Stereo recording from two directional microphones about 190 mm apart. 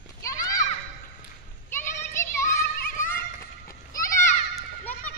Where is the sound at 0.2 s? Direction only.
20° left (ahead or behind).